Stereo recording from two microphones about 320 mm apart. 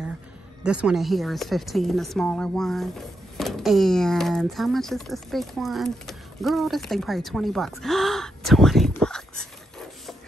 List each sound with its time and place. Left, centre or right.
0.7 s a woman's voice: centre